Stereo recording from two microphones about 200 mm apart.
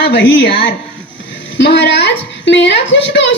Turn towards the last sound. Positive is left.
turn(degrees=60)  # may be behind; listen again after turning